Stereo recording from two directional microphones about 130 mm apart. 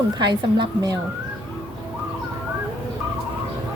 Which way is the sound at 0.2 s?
35° right (ahead or behind).